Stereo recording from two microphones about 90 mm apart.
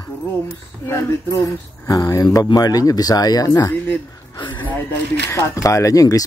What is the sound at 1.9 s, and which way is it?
Speech, 40° left (ahead or behind).